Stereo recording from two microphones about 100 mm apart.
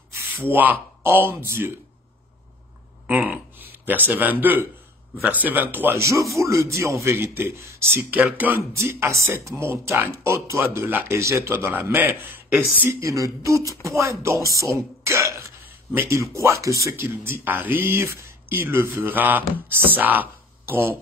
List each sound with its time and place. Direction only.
0.1 s speech: 20° right (ahead or behind)
3.1 s a sound: 15° right (ahead or behind)
3.7 s speech: 20° right (ahead or behind)
8.7 s speech: 30° right (ahead or behind)
13.0 s a sound: 30° right (ahead or behind)
13.8 s speech: 30° right (ahead or behind)